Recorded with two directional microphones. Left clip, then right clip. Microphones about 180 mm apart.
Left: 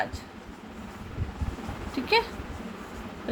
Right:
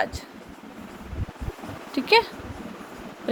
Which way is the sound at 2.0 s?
35° right (ahead or behind).